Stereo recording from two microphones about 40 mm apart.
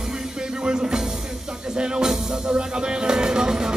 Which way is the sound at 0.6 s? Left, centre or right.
Centre.